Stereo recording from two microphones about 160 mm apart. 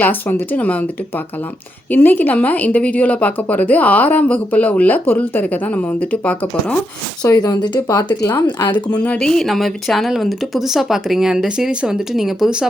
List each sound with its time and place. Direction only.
0.0 s a woman's voice: 10° left (ahead or behind)
1.9 s a woman's voice: 10° left (ahead or behind)
7.2 s speech: 25° left (ahead or behind)
9.0 s speech: 5° left (ahead or behind)